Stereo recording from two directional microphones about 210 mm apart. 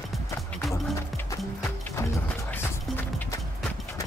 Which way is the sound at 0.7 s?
15° left (ahead or behind).